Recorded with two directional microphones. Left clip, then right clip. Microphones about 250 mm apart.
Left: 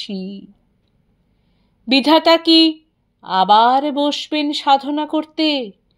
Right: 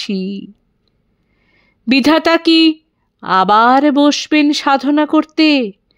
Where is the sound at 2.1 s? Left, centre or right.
Right.